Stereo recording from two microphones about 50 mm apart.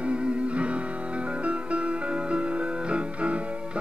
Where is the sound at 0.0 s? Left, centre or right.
Right.